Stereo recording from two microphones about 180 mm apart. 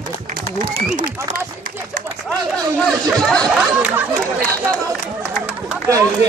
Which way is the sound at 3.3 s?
Centre (ahead or behind).